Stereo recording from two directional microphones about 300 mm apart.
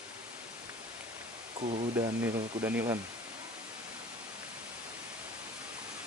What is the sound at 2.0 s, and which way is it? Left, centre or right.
Speech, centre.